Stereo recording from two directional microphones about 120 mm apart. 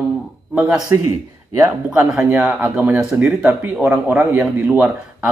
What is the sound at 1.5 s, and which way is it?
Speech, 25° right (ahead or behind).